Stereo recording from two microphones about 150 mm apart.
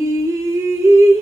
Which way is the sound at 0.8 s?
20° right (ahead or behind).